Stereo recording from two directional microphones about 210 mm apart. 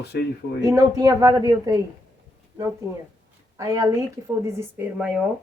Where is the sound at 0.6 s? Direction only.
15° right (ahead or behind).